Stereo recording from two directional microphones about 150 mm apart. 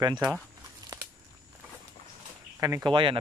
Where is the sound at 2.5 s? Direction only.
20° right (ahead or behind).